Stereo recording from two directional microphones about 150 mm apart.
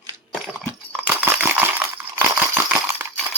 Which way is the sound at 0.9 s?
10° right (ahead or behind).